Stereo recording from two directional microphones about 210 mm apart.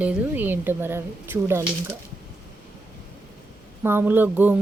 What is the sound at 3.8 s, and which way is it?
Speech, 10° right (ahead or behind).